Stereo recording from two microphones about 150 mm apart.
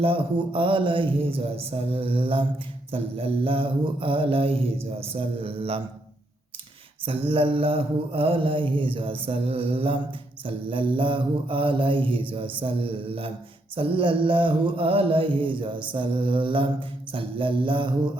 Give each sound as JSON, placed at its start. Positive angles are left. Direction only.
{"t": 0.0, "sound": "mantra", "side_deg": -35}
{"t": 7.0, "sound": "mantra", "side_deg": -35}